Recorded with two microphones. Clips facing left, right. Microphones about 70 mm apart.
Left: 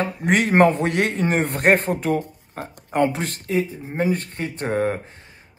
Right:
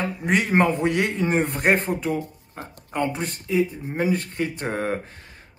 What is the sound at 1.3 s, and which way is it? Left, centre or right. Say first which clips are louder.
Speech: left 3 dB; left.